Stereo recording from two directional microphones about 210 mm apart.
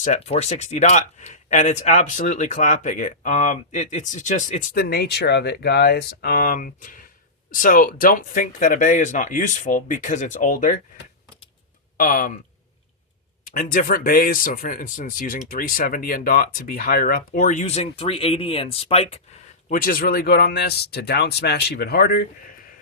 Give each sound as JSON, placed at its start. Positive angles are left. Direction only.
{"t": 0.0, "sound": "speech", "side_deg": 30}
{"t": 11.9, "sound": "speech", "side_deg": 40}
{"t": 13.4, "sound": "speech", "side_deg": 40}
{"t": 19.6, "sound": "speech", "side_deg": 40}